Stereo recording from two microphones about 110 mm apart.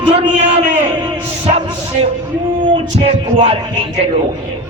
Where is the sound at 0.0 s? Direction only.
60° right (ahead or behind).